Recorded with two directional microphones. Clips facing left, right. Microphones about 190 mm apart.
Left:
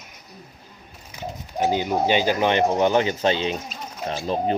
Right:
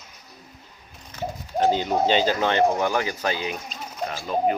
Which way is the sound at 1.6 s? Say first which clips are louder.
Even; 10° left (ahead or behind).